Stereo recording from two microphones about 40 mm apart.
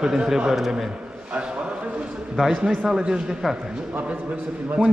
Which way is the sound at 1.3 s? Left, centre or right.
Right.